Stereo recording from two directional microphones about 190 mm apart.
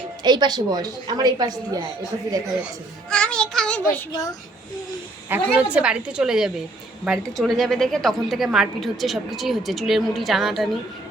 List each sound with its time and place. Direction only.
0.2 s a woman's voice: 20° right (ahead or behind)
3.1 s child singing: 5° left (ahead or behind)
4.1 s a child's voice: 20° left (ahead or behind)
5.3 s a woman's voice: 10° right (ahead or behind)